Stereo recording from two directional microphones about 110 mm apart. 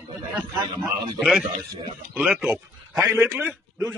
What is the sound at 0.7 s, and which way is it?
Speech, 45° right (ahead or behind).